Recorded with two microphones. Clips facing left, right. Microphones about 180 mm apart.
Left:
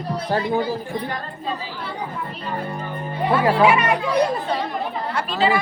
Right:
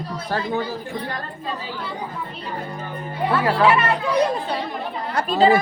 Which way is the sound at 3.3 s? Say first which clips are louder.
Left 2 dB; 10° left (ahead or behind).